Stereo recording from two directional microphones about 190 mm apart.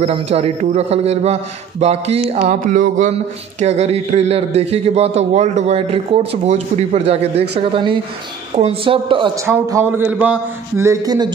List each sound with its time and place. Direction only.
0.0 s a man's voice: 35° right (ahead or behind)
9.5 s speech: 15° right (ahead or behind)